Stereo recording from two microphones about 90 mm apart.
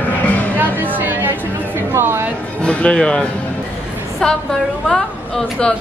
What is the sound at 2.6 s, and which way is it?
A woman's voice, 15° left (ahead or behind).